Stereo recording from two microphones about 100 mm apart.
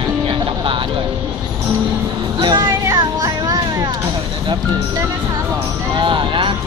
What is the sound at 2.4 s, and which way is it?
Music, 45° right (ahead or behind).